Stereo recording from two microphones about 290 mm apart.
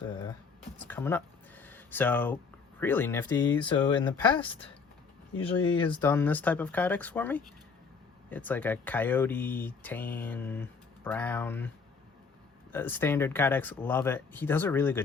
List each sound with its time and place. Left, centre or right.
0.9 s a sound: centre
2.8 s speech: centre
3.6 s speech: centre
12.7 s speech: centre